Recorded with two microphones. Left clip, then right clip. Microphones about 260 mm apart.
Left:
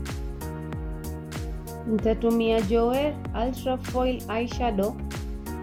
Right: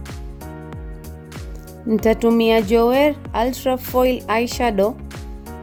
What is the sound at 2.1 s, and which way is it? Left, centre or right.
Speech, right.